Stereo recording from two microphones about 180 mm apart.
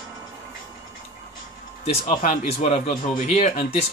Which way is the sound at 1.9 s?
40° left (ahead or behind).